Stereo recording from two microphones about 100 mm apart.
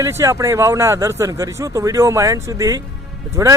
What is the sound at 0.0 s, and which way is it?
Speech, 30° right (ahead or behind).